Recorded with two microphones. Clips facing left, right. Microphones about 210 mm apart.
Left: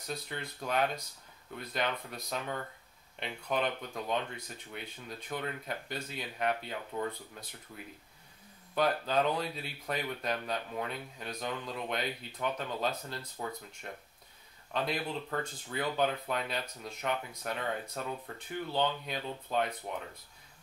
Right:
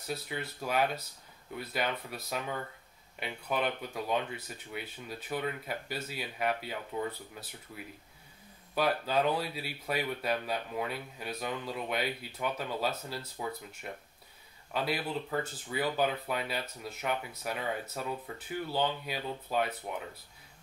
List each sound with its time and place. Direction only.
0.0 s speech: 5° right (ahead or behind)